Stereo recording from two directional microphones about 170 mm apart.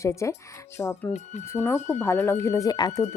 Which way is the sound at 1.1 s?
45° left (ahead or behind).